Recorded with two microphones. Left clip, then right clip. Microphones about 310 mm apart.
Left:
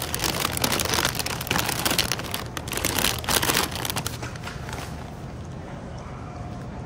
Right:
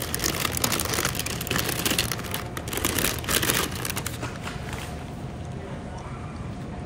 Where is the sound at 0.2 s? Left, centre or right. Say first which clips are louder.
Left 2 dB; centre.